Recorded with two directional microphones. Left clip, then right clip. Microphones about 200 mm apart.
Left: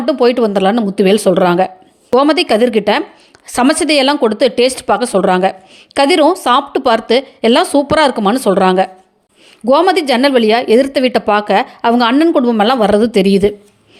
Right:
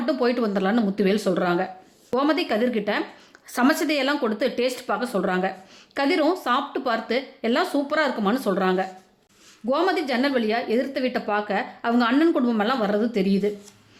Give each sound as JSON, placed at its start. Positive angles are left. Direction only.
{"t": 0.0, "sound": "speech", "side_deg": 30}